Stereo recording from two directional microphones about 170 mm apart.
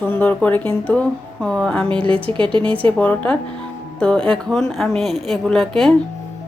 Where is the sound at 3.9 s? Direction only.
5° left (ahead or behind).